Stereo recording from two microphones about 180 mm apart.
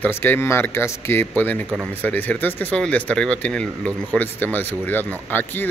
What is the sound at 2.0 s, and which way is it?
Speech, 10° left (ahead or behind).